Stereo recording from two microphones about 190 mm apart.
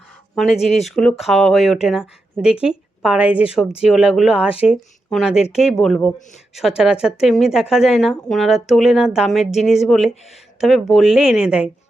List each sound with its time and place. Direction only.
0.3 s a woman's voice: centre (ahead or behind)